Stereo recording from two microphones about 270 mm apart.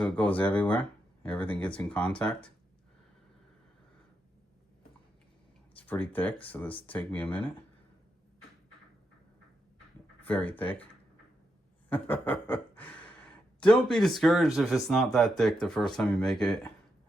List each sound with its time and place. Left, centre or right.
0.0 s speech: centre
5.7 s speech: centre
10.2 s speech: centre
11.9 s a sound: centre
13.6 s speech: centre